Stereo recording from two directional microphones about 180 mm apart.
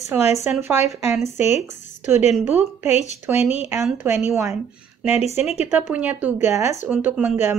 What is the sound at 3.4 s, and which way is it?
Speech, 35° left (ahead or behind).